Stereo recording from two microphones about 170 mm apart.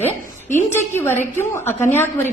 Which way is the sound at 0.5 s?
15° left (ahead or behind).